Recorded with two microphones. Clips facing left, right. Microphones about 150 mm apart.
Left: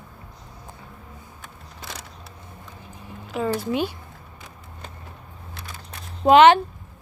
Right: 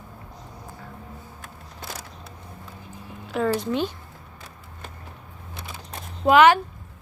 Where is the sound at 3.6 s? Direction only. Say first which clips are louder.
Left 1 dB; 10° left (ahead or behind).